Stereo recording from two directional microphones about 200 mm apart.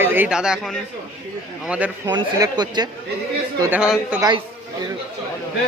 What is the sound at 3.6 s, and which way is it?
Speech, 5° right (ahead or behind).